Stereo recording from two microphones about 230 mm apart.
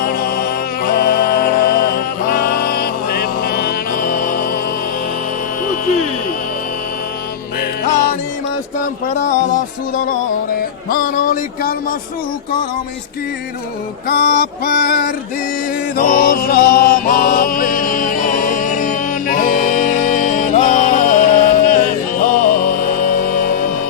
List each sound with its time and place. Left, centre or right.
0.0 s music: left
7.9 s music: left
9.0 s speech: left
10.8 s speech: left
14.1 s speech: left
16.0 s mantra: left